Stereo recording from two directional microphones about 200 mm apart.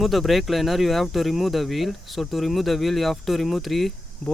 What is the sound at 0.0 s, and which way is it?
Speech, centre (ahead or behind).